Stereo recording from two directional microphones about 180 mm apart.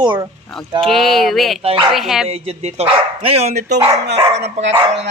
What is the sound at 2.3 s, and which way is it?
Speech, 35° right (ahead or behind).